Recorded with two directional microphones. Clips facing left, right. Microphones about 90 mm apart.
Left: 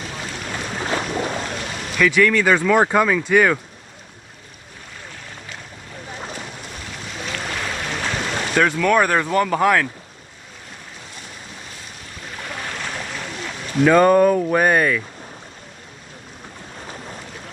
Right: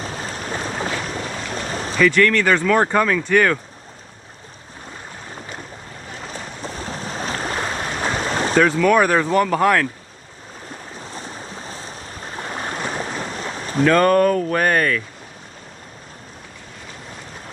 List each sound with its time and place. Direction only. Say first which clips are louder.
0.0 s boat: right 2 dB; 35° right (ahead or behind)
1.5 s a sound: right 3 dB; 35° right (ahead or behind)
2.0 s speech: right 1 dB; 5° left (ahead or behind)
6.3 s waves: right 3 dB; 35° right (ahead or behind)
8.5 s speech: right 2 dB; centre (ahead or behind)
11.0 s waves: right 6 dB; 35° right (ahead or behind)
13.8 s speech: left 2 dB; 10° left (ahead or behind)